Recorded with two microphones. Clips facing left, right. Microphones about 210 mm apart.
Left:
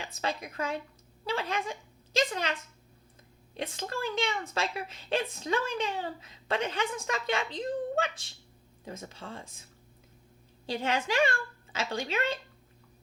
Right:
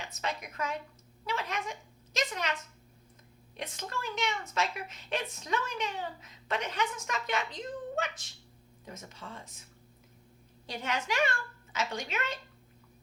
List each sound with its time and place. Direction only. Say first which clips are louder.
0.1 s a woman's voice: left 4 dB; 30° left (ahead or behind)
3.6 s a woman's voice: left 5 dB; 30° left (ahead or behind)
10.7 s a woman's voice: left 4 dB; 30° left (ahead or behind)